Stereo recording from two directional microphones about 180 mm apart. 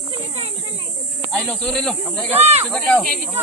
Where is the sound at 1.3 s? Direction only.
5° left (ahead or behind).